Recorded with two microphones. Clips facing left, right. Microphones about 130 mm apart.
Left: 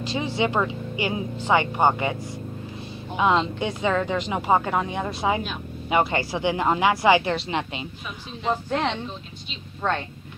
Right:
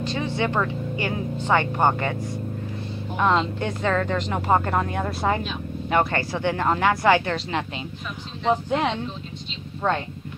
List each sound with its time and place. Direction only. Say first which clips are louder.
0.0 s speech: even; 10° left (ahead or behind)
3.2 s speech: even; 5° left (ahead or behind)
8.5 s speech: right 2 dB; 10° right (ahead or behind)